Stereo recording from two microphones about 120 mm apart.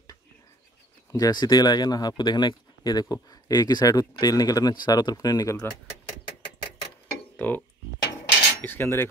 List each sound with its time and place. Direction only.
1.1 s speech: 35° left (ahead or behind)
7.3 s speech: 15° left (ahead or behind)
8.5 s cutlery: 20° left (ahead or behind)